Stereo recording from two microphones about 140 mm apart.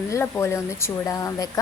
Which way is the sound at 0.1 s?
20° left (ahead or behind).